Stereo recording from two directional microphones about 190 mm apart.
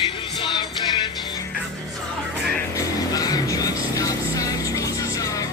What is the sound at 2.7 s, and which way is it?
Music, 20° left (ahead or behind).